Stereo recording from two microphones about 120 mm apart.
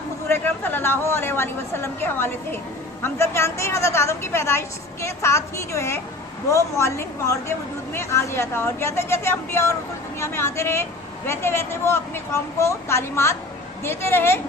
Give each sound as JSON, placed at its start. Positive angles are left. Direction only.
{"t": 0.3, "sound": "a woman's voice", "side_deg": 20}